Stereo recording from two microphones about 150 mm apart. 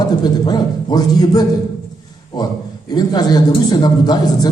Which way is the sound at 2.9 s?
25° left (ahead or behind).